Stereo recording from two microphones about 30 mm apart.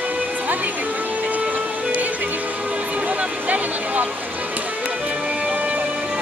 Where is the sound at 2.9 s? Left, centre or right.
Right.